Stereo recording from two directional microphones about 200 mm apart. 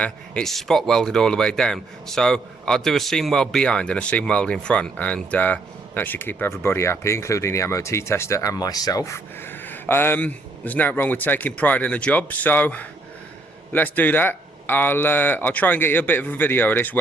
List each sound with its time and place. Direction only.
0.0 s speech: 5° left (ahead or behind)